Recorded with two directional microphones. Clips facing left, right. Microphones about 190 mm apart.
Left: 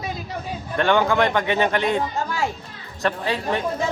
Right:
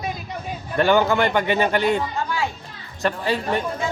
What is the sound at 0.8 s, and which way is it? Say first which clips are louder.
A man's voice: right 1 dB; 5° right (ahead or behind).